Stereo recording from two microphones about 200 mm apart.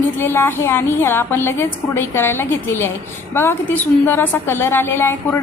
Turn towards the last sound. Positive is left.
turn(degrees=10)  # may be behind; listen again after turning